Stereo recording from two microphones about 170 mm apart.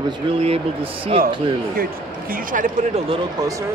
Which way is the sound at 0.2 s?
30° right (ahead or behind).